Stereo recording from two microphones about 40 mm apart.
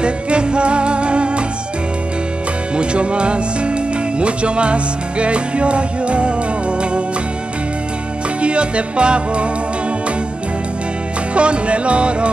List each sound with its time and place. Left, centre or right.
0.0 s music: right
2.7 s music: right
8.4 s music: right
11.3 s music: right